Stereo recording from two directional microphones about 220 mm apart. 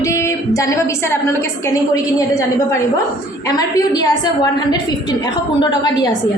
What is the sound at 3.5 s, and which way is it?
A woman's voice, 20° left (ahead or behind).